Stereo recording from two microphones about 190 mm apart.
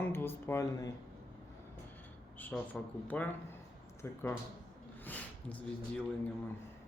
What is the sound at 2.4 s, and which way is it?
Speech, 5° left (ahead or behind).